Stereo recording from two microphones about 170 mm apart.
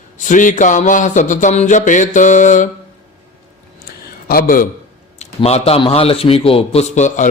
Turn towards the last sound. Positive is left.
turn(degrees=45)  # may be behind; listen again after turning